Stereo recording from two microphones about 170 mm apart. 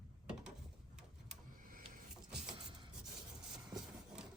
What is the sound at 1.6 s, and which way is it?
Vehicle, 55° right (ahead or behind).